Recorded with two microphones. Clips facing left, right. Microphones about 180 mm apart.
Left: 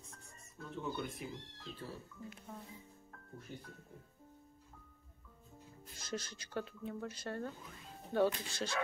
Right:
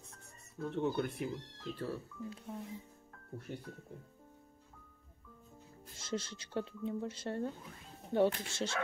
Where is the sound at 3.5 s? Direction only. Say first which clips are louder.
Right 5 dB; 65° right (ahead or behind).